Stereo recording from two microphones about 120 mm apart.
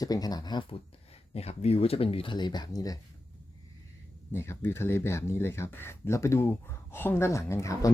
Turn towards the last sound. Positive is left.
turn(degrees=25)  # may be behind; listen again after turning